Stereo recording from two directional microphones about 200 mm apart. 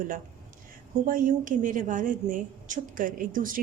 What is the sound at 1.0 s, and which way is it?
A woman's voice, 45° right (ahead or behind).